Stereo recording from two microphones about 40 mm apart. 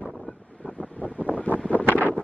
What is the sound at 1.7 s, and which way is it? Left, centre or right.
Wind noise, left.